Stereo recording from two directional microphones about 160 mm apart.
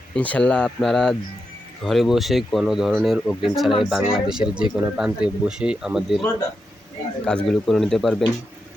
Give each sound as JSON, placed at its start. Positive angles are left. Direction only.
{"t": 0.1, "sound": "speech", "side_deg": 10}
{"t": 7.3, "sound": "speech", "side_deg": 5}